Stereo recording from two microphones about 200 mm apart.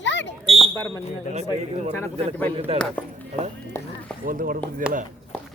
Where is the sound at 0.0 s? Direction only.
65° left (ahead or behind).